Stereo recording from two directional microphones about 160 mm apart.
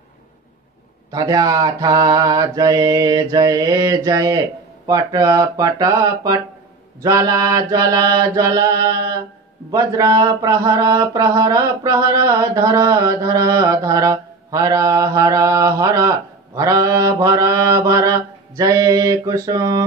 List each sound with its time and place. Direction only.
1.1 s mantra: 25° right (ahead or behind)